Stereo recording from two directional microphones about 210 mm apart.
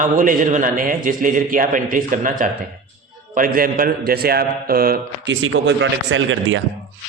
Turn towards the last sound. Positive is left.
turn(degrees=-65)  # may be behind; listen again after turning